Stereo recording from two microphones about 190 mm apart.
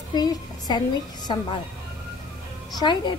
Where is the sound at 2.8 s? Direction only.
25° left (ahead or behind).